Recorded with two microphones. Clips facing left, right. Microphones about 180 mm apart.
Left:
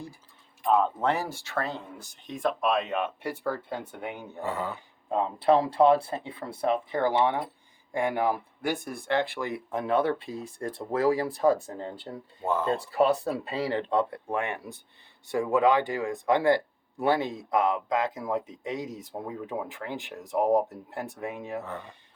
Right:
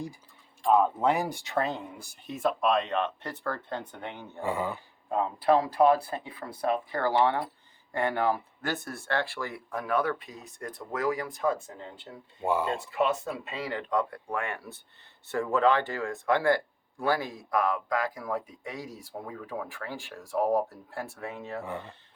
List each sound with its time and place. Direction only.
0.7 s speech: 10° right (ahead or behind); by 4.4 s 10° left (ahead or behind)
4.4 s speech: 10° right (ahead or behind)
5.1 s a man's voice: 25° left (ahead or behind)
12.4 s speech: 10° right (ahead or behind)
12.8 s a man's voice: 35° left (ahead or behind); by 21.6 s 15° left (ahead or behind)
21.6 s speech: 10° right (ahead or behind)